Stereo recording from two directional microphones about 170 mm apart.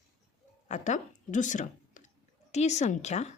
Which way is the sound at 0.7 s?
45° left (ahead or behind).